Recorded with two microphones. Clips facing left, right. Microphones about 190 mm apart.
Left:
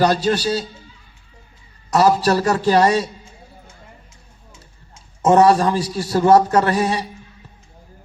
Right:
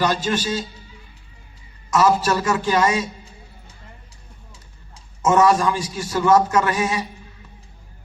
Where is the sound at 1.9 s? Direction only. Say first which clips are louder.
Left 3 dB; 35° left (ahead or behind).